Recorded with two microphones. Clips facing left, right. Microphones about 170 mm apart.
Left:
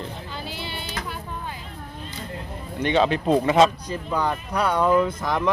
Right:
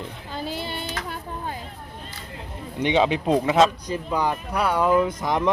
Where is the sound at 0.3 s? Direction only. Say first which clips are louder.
Right 4 dB; 45° right (ahead or behind).